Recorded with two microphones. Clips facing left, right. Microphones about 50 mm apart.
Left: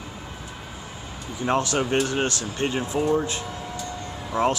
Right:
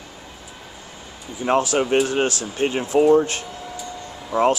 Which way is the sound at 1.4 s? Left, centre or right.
Centre.